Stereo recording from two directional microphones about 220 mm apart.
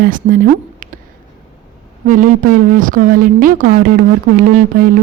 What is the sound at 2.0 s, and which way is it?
A woman's voice, 35° right (ahead or behind).